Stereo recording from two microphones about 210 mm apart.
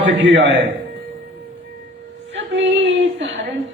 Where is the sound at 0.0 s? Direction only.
65° right (ahead or behind).